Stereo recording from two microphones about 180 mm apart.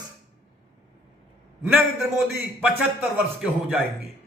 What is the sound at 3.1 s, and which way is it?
Speech, 5° right (ahead or behind).